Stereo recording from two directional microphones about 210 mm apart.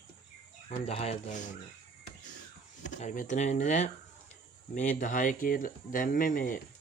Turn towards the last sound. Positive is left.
turn(degrees=40)  # may be behind; listen again after turning